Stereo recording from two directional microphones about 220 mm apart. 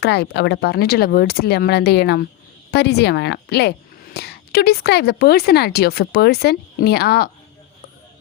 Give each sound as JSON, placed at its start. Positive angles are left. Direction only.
{"t": 0.0, "sound": "speech", "side_deg": 50}